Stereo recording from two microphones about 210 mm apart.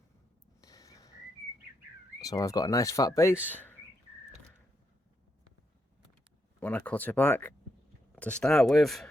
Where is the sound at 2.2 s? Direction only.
15° left (ahead or behind).